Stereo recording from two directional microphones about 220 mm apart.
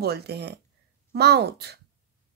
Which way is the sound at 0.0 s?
50° right (ahead or behind).